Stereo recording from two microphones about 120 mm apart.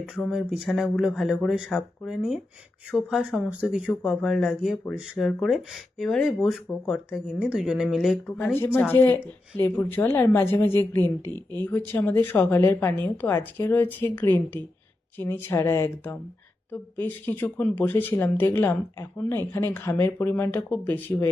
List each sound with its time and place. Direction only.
0.3 s speech: 5° right (ahead or behind)
8.5 s a woman's voice: 15° left (ahead or behind)
11.3 s speech: 30° right (ahead or behind)
11.6 s a woman's voice: 15° left (ahead or behind)